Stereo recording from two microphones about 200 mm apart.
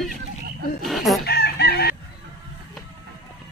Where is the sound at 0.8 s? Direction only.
Centre (ahead or behind).